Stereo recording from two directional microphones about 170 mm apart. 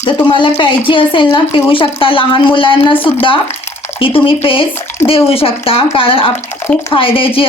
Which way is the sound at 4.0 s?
30° left (ahead or behind).